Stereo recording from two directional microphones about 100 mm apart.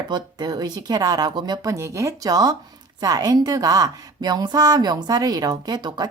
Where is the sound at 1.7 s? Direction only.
30° right (ahead or behind).